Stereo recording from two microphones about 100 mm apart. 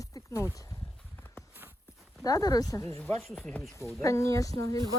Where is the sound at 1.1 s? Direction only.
20° left (ahead or behind).